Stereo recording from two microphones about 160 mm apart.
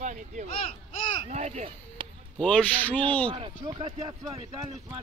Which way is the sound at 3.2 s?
30° right (ahead or behind).